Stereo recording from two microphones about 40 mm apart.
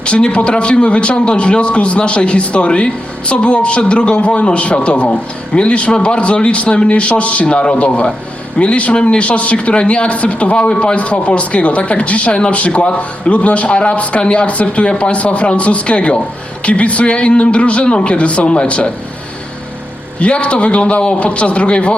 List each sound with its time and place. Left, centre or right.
0.0 s a man's voice: left
7.4 s a man's voice: left
20.1 s speech: left